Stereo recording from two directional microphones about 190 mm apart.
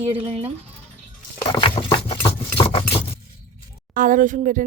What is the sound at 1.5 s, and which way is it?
Patter, 30° left (ahead or behind).